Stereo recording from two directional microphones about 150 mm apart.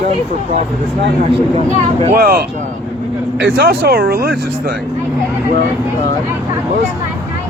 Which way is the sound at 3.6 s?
90° right.